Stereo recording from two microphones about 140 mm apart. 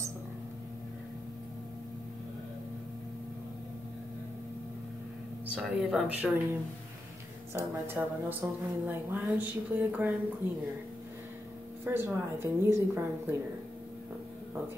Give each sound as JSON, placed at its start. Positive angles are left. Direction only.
{"t": 5.5, "sound": "speech", "side_deg": 0}
{"t": 7.5, "sound": "a woman's voice", "side_deg": -15}
{"t": 11.8, "sound": "a woman's voice", "side_deg": -15}